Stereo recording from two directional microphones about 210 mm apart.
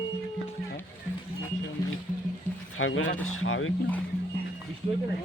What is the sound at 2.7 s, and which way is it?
Speech, 70° left (ahead or behind).